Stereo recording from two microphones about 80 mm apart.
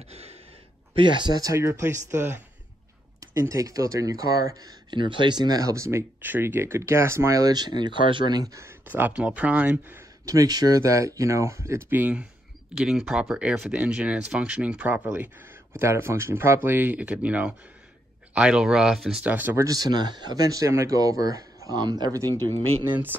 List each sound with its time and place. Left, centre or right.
0.9 s speech: right
1.4 s speech: right
3.2 s speech: right
4.9 s speech: right
8.4 s speech: right
8.8 s speech: right
10.2 s speech: right
11.9 s speech: right
12.7 s speech: centre
15.8 s speech: right; by 19.2 s centre
19.2 s speech: right
19.5 s speech: right
22.8 s speech: right